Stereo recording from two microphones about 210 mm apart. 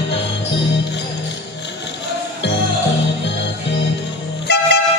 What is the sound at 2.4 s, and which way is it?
Music, 55° left (ahead or behind).